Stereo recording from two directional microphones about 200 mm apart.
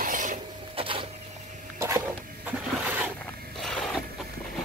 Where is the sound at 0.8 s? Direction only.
25° right (ahead or behind).